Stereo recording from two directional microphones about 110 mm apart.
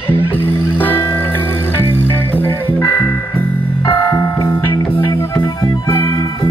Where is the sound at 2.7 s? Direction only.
15° left (ahead or behind).